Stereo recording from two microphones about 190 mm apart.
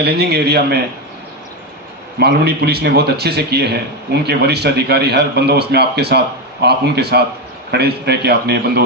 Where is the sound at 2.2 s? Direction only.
60° right (ahead or behind).